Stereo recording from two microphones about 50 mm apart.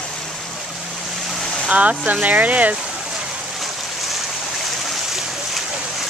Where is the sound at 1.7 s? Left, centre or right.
Right.